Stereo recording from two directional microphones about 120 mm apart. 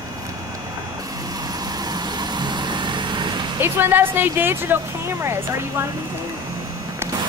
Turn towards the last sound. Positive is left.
turn(degrees=-20)  # may be behind; listen again after turning